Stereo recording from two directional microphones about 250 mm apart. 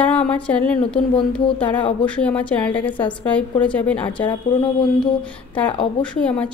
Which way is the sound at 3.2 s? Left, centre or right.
Centre.